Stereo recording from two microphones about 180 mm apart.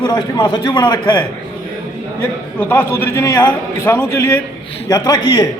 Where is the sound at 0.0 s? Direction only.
25° left (ahead or behind).